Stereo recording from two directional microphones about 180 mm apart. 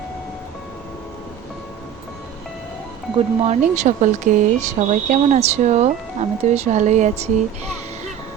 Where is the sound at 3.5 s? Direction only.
40° right (ahead or behind).